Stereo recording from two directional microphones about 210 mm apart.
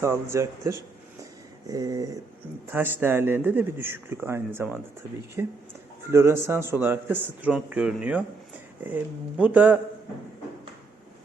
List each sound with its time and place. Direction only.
0.0 s a man's voice: 15° right (ahead or behind)
1.2 s a sound: 15° right (ahead or behind)
2.6 s a man's voice: 10° right (ahead or behind)